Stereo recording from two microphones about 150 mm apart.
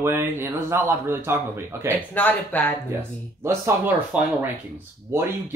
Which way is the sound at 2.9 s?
15° right (ahead or behind).